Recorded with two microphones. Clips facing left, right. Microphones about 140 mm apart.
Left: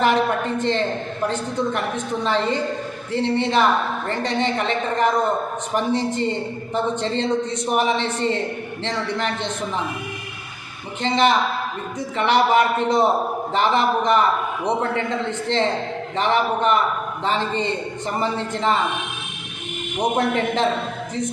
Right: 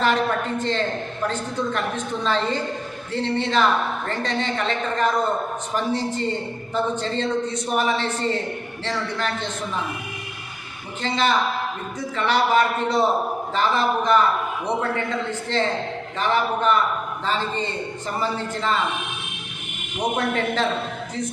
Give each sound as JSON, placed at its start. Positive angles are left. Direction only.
{"t": 0.6, "sound": "a woman's voice", "side_deg": 20}
{"t": 2.2, "sound": "a woman's voice", "side_deg": 15}
{"t": 11.0, "sound": "a woman's voice", "side_deg": 20}
{"t": 20.1, "sound": "a woman's voice", "side_deg": 20}